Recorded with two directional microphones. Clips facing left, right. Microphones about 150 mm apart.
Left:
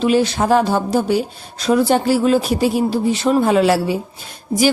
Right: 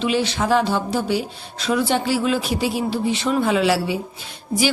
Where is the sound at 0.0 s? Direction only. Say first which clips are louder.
Left 5 dB; 45° left (ahead or behind).